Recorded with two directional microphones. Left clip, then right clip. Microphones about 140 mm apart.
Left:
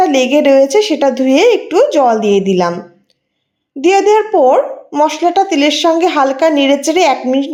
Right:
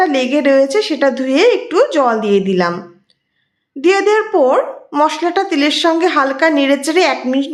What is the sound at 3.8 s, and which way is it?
A woman's voice, 10° left (ahead or behind).